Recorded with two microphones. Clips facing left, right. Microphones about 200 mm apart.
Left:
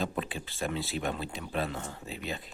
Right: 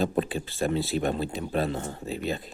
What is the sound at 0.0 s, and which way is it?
Speech, 40° right (ahead or behind).